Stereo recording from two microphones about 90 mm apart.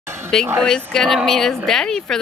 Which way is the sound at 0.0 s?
30° right (ahead or behind).